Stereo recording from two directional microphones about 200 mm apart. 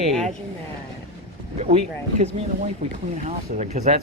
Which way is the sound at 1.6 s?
35° right (ahead or behind).